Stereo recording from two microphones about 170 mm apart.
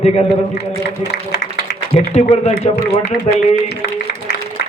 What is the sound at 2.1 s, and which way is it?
Speech, 40° left (ahead or behind).